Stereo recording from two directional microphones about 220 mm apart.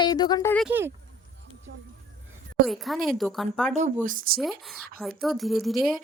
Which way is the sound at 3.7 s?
35° right (ahead or behind).